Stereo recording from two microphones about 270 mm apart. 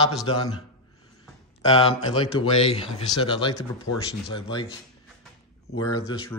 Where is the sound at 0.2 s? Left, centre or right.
Centre.